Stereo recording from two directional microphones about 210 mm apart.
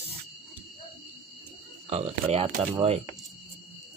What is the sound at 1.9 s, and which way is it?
Speech, 30° right (ahead or behind).